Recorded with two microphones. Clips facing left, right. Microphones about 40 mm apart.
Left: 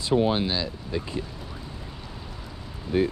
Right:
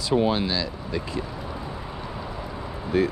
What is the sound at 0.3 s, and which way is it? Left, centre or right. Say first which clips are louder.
Speech: right 1 dB; centre.